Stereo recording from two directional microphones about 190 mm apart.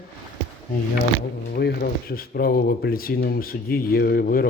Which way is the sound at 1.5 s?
55° left (ahead or behind).